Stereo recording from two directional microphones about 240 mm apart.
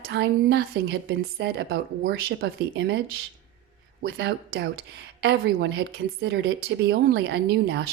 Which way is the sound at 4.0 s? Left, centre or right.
Right.